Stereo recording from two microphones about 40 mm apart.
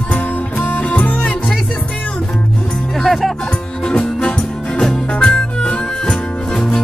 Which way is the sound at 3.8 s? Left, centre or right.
Centre.